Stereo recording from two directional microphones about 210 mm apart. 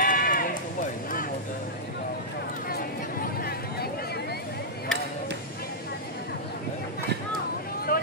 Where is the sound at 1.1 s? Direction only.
40° left (ahead or behind).